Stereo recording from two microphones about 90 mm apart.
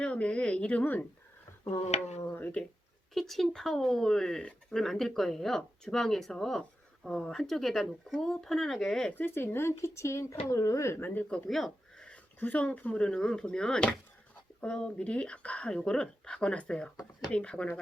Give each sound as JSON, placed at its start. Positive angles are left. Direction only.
{"t": 0.0, "sound": "speech", "side_deg": 10}
{"t": 2.3, "sound": "speech", "side_deg": 20}
{"t": 3.2, "sound": "speech", "side_deg": 0}
{"t": 9.1, "sound": "speech", "side_deg": 25}
{"t": 11.4, "sound": "speech", "side_deg": 0}